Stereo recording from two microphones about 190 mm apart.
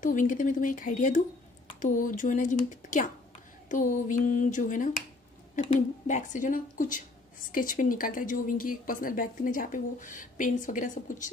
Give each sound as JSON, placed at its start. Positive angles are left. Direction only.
{"t": 0.0, "sound": "a woman's voice", "side_deg": 40}